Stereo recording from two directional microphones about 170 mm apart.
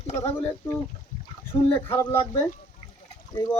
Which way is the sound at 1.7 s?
15° left (ahead or behind).